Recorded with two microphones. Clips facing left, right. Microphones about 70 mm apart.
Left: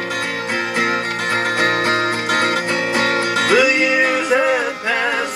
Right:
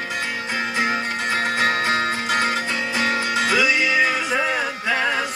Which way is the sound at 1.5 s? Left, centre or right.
Left.